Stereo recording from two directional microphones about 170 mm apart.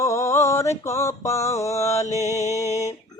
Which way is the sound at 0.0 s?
15° left (ahead or behind).